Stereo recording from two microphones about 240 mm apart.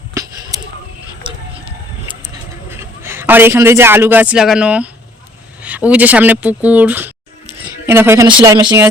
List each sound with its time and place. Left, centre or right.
0.1 s a sound: centre
1.2 s music: right
3.0 s a man's voice: centre